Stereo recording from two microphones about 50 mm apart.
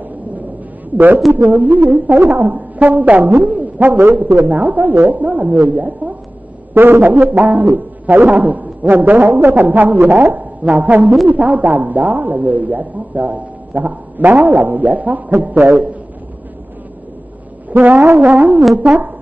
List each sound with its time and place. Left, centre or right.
0.9 s a woman's voice: right
6.7 s a man's voice: right
7.2 s a woman's voice: right
17.6 s music: right
18.1 s a woman's voice: right